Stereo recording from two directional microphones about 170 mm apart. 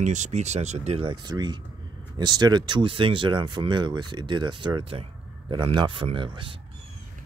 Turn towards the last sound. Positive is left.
turn(degrees=-30)  # may be behind; listen again after turning